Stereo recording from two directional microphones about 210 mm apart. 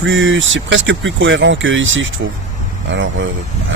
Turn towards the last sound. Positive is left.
turn(degrees=-65)  # may be behind; listen again after turning